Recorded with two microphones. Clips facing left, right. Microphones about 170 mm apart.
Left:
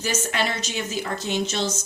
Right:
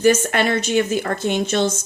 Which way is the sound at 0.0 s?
55° right (ahead or behind).